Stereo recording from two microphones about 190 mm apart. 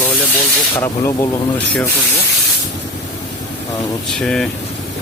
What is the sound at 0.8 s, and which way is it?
Speech, 15° left (ahead or behind).